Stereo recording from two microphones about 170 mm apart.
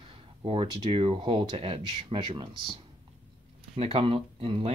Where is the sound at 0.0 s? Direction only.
30° right (ahead or behind).